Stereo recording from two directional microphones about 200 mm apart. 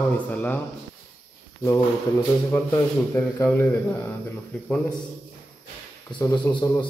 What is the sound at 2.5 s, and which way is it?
Speech, 15° left (ahead or behind).